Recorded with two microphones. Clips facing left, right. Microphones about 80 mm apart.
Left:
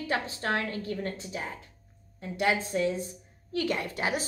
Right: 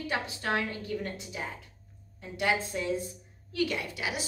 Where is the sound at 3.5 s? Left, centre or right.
Left.